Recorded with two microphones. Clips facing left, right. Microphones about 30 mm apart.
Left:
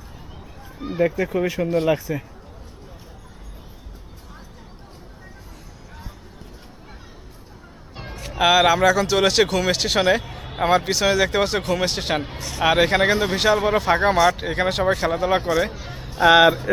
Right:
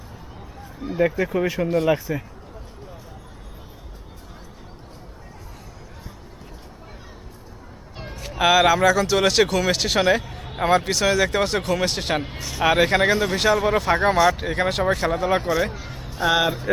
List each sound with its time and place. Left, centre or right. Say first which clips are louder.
0.8 s speech: even; centre
1.2 s speech: even; centre
7.9 s speech: left 2 dB; centre
16.2 s speech: left 7 dB; left
16.7 s speech: even; centre